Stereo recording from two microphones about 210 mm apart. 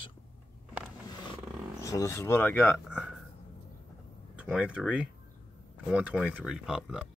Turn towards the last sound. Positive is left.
turn(degrees=-5)  # may be behind; listen again after turning